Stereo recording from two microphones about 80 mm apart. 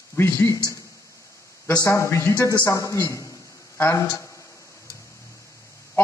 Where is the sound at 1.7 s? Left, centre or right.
Left.